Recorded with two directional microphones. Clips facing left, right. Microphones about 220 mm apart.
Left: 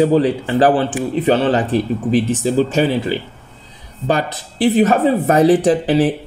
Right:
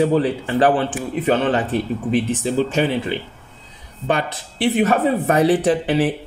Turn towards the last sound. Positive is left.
turn(degrees=35)  # may be behind; listen again after turning